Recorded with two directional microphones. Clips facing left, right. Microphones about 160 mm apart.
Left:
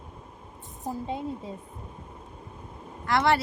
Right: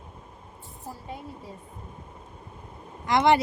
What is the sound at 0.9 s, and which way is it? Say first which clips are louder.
Speech: left 7 dB; 25° left (ahead or behind).